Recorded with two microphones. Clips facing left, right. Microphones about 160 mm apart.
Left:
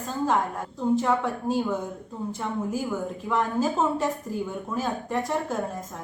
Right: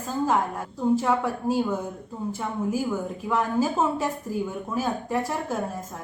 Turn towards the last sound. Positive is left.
turn(degrees=-5)  # may be behind; listen again after turning